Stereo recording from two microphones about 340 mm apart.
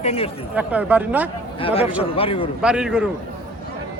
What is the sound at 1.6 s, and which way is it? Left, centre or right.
Speech, centre.